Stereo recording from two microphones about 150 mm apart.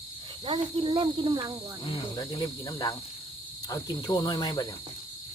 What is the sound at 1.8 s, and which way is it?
Cricket, 35° left (ahead or behind).